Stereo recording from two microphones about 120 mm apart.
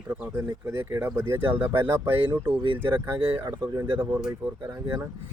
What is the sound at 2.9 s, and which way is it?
Speech, 20° right (ahead or behind).